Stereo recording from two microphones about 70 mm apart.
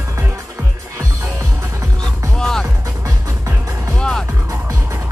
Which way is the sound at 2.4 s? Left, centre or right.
Centre.